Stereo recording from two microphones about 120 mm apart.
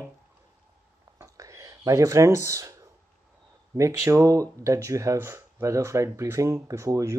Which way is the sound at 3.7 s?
25° right (ahead or behind).